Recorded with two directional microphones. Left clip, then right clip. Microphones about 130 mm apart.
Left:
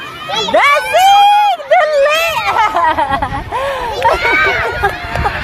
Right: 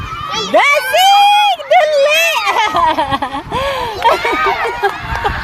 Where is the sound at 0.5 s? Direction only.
55° right (ahead or behind).